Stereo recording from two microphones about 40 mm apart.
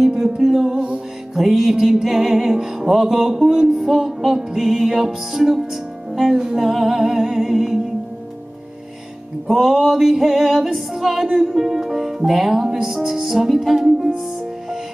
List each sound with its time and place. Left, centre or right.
0.0 s music: centre
0.7 s music: right
1.3 s music: centre
9.5 s music: centre